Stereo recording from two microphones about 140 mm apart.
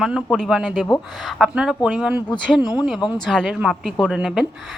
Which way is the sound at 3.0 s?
30° left (ahead or behind).